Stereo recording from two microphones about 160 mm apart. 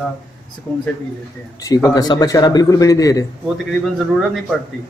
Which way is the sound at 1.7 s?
25° left (ahead or behind).